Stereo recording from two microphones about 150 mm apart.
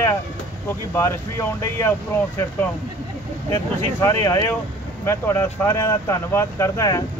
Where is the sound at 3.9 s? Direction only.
15° left (ahead or behind).